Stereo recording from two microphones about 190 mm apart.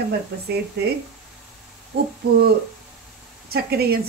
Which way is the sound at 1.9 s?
55° right (ahead or behind).